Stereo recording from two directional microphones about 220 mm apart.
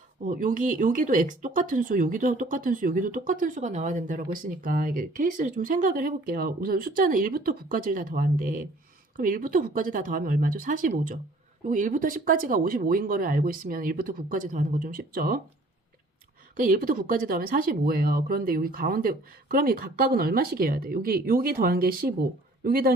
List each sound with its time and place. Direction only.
0.3 s speech: 40° right (ahead or behind)
16.6 s speech: 40° right (ahead or behind)